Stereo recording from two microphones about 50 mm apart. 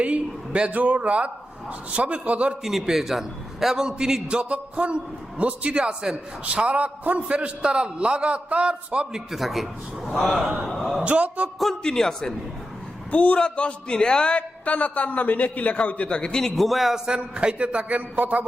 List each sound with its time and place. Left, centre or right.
0.0 s a man's voice: right
2.8 s a man's voice: centre; by 9.0 s right
9.1 s a man's voice: centre
11.0 s a man's voice: right
11.8 s a man's voice: centre
13.1 s a man's voice: left; by 17.0 s centre
17.1 s a man's voice: right